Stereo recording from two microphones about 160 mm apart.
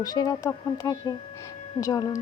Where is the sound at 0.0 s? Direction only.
25° left (ahead or behind).